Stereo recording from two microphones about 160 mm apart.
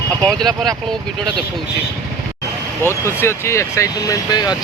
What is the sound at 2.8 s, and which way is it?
Speech, 15° left (ahead or behind).